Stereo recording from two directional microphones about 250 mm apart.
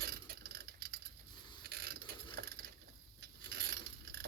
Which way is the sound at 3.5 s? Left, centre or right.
Right.